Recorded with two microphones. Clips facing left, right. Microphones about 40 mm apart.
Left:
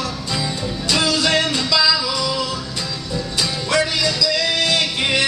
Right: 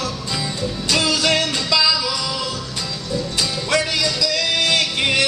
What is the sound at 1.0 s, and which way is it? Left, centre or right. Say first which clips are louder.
Music: left 1 dB; centre.